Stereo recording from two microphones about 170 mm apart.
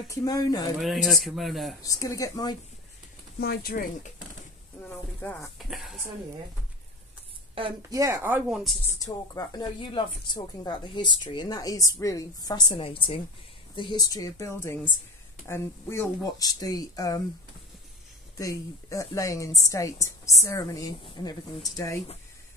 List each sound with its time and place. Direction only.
0.1 s a woman's voice: 20° left (ahead or behind)
0.7 s speech: centre (ahead or behind)
1.8 s a woman's voice: 20° left (ahead or behind)
3.3 s speech: 65° left (ahead or behind)
4.8 s a sound: 10° left (ahead or behind)
5.6 s speech: centre (ahead or behind)
7.9 s speech: 20° right (ahead or behind); by 8.7 s 5° right (ahead or behind)
9.0 s a woman's voice: 20° left (ahead or behind)
18.4 s a woman's voice: 20° left (ahead or behind)